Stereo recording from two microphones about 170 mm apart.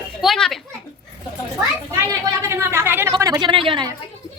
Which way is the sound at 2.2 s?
15° right (ahead or behind).